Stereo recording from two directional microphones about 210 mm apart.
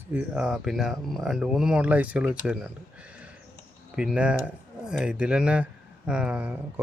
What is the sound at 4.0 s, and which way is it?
A man's voice, 5° right (ahead or behind).